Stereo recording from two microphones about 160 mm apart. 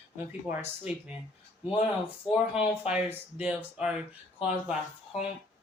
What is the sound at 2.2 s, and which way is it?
Speech, 5° right (ahead or behind).